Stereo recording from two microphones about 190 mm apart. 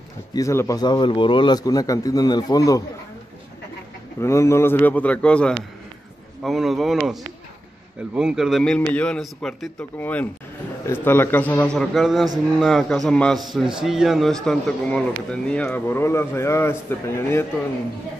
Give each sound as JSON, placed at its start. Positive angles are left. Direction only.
{"t": 0.3, "sound": "a man's voice", "side_deg": 15}
{"t": 4.2, "sound": "a man's voice", "side_deg": 15}